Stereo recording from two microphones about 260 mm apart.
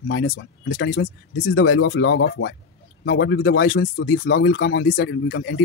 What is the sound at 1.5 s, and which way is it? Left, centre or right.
Speech, left.